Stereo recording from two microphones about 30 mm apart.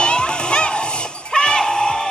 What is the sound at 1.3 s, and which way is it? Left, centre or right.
Music, left.